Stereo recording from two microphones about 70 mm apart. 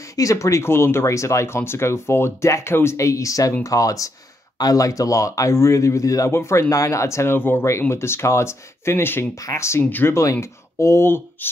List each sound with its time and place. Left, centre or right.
0.1 s speech: left
9.3 s speech: left
9.8 s speech: left
10.4 s speech: left